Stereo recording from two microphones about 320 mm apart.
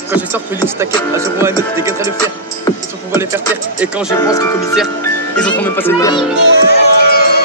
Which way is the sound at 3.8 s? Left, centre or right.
Centre.